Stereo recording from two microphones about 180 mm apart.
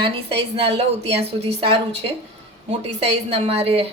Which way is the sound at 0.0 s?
30° right (ahead or behind).